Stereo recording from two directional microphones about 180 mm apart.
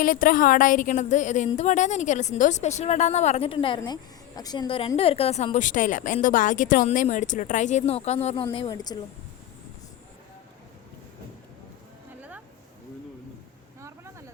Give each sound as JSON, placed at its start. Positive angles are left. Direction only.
{"t": 0.0, "sound": "a woman's voice", "side_deg": 50}
{"t": 8.5, "sound": "speech", "side_deg": 25}
{"t": 13.8, "sound": "a sound", "side_deg": -15}